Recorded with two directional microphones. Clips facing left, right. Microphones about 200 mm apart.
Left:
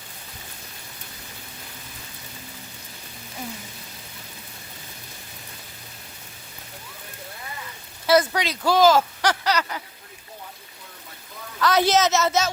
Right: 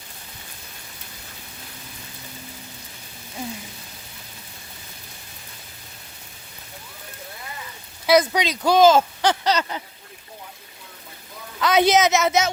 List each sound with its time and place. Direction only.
8.0 s speech: 15° right (ahead or behind)
11.6 s a woman's voice: 20° right (ahead or behind)